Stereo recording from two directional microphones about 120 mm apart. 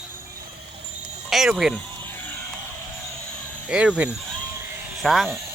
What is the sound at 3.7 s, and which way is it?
Speech, 10° right (ahead or behind).